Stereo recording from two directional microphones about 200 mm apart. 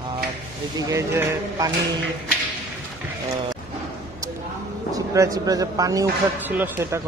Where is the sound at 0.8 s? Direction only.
15° right (ahead or behind).